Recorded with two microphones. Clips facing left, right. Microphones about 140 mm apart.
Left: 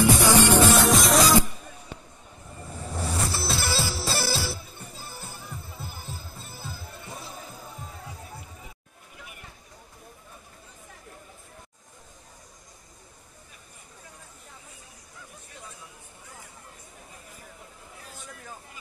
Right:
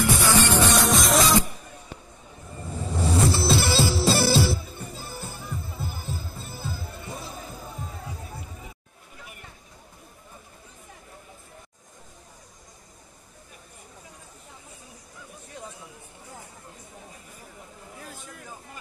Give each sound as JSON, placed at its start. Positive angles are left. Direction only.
{"t": 0.0, "sound": "music", "side_deg": 15}
{"t": 0.7, "sound": "music", "side_deg": 0}
{"t": 2.9, "sound": "vehicle", "side_deg": 0}
{"t": 3.3, "sound": "music", "side_deg": -25}